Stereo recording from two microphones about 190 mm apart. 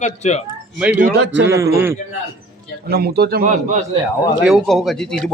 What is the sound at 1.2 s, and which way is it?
Speech, 70° right (ahead or behind).